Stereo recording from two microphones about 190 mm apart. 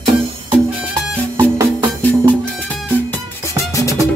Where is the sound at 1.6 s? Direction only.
20° right (ahead or behind).